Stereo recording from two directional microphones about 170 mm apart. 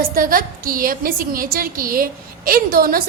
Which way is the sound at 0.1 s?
55° right (ahead or behind).